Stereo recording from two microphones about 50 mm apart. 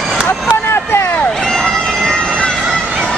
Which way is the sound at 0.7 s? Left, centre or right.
Left.